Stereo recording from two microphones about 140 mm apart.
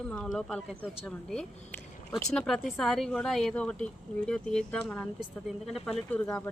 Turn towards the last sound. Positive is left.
turn(degrees=10)  # may be behind; listen again after turning